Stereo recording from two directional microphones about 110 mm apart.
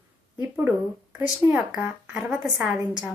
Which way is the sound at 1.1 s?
10° right (ahead or behind).